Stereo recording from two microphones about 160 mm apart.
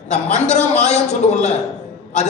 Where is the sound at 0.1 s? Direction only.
45° left (ahead or behind).